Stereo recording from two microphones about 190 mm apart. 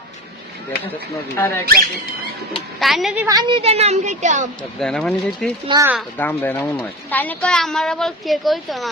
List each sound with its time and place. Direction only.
0.9 s speech: 15° left (ahead or behind)
2.7 s speech: centre (ahead or behind)
3.2 s a woman's voice: 25° right (ahead or behind); by 4.4 s 40° right (ahead or behind)
4.8 s speech: centre (ahead or behind)
5.6 s speech: 20° right (ahead or behind)
6.1 s speech: 10° left (ahead or behind)